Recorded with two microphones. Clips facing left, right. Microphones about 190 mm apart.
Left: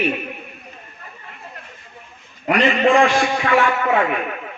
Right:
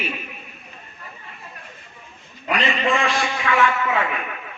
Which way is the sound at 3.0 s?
50° left (ahead or behind).